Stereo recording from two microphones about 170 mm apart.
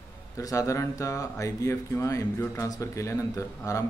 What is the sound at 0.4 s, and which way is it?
A man's voice, 20° left (ahead or behind).